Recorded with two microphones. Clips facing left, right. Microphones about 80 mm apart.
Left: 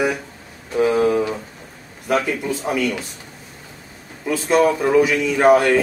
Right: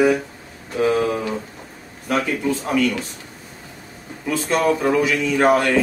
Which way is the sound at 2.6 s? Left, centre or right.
Centre.